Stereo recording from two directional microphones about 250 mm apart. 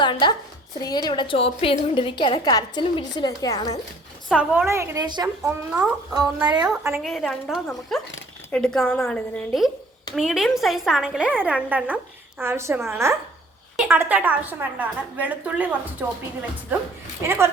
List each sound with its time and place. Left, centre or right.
0.0 s a woman's voice: centre
4.3 s a woman's voice: centre
5.4 s a woman's voice: centre
6.1 s a woman's voice: centre
6.7 s a woman's voice: centre
17.2 s a woman's voice: centre